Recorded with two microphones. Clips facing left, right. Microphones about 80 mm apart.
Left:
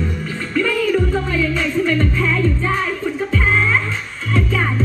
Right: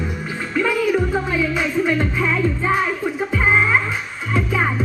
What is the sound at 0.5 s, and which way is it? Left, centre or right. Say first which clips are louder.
Music: left 1 dB; centre.